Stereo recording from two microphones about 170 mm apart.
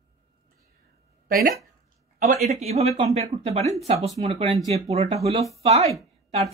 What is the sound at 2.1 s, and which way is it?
Speech, 45° right (ahead or behind).